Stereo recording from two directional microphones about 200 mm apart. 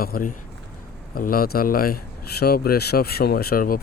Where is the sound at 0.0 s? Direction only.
45° left (ahead or behind).